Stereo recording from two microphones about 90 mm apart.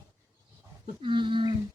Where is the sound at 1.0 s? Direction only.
65° right (ahead or behind).